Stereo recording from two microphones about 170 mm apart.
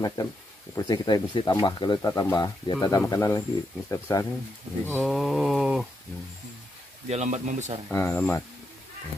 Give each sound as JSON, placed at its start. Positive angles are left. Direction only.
{"t": 0.0, "sound": "speech", "side_deg": 20}
{"t": 5.0, "sound": "mantra", "side_deg": 0}
{"t": 7.1, "sound": "speech", "side_deg": -40}
{"t": 7.9, "sound": "speech", "side_deg": 15}